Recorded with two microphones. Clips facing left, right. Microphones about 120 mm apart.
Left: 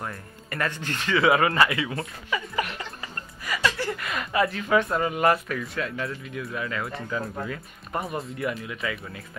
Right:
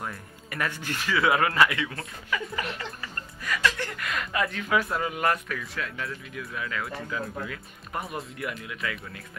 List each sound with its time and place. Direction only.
0.0 s speech: 5° right (ahead or behind)
2.5 s music: 15° left (ahead or behind)
3.5 s speech: 5° left (ahead or behind)